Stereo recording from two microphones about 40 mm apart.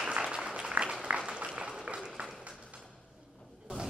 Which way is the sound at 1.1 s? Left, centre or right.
Right.